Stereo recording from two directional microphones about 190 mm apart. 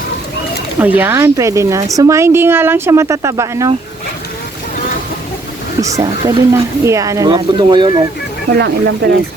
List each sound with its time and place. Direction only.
0.8 s speech: 10° right (ahead or behind)
5.8 s speech: 15° right (ahead or behind)
8.5 s speech: 60° right (ahead or behind)